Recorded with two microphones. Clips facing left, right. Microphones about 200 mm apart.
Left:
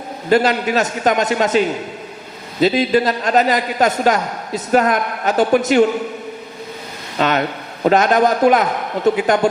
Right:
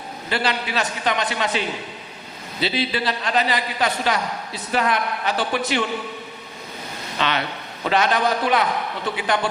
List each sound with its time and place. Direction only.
0.3 s a man's voice: 45° left (ahead or behind)
7.2 s a man's voice: 45° left (ahead or behind)